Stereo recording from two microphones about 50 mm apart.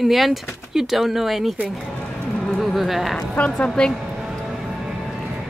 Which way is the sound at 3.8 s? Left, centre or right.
Centre.